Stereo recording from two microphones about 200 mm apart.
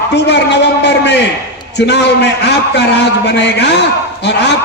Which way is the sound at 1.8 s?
60° left (ahead or behind).